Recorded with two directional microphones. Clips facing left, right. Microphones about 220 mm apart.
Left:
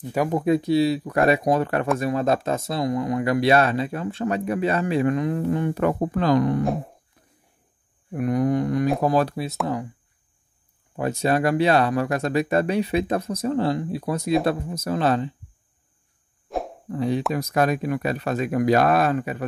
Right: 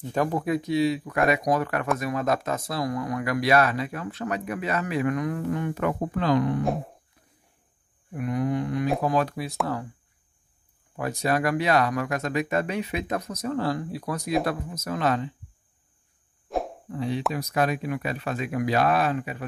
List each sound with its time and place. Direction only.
0.0 s speech: 10° left (ahead or behind)
0.5 s speech: 30° left (ahead or behind)
6.6 s a sound: centre (ahead or behind)
8.1 s speech: 45° left (ahead or behind); by 9.6 s 25° left (ahead or behind)
11.0 s speech: 25° left (ahead or behind)
16.4 s a sound: centre (ahead or behind)
16.9 s speech: 45° left (ahead or behind)